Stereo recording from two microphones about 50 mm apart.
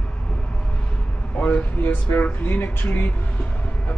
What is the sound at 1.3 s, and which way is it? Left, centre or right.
Speech, left.